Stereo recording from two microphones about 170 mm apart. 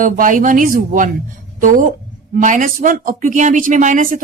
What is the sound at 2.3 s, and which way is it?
Speech, 50° right (ahead or behind).